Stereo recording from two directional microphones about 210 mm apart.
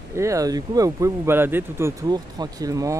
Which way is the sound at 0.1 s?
15° right (ahead or behind).